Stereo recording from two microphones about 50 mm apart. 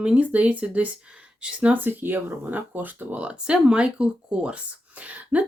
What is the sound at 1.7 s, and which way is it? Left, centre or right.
Speech, right.